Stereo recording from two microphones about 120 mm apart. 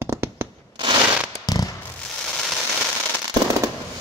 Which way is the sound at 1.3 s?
30° left (ahead or behind).